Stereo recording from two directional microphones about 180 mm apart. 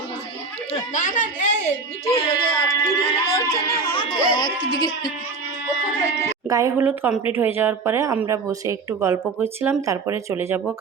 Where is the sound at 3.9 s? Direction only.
25° left (ahead or behind).